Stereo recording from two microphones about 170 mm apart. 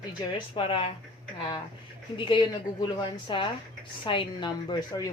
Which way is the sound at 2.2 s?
30° left (ahead or behind).